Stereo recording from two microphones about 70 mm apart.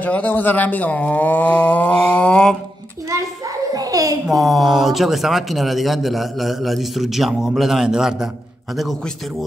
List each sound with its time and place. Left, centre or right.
0.0 s speech: left
3.7 s a sound: right
4.3 s a man's voice: centre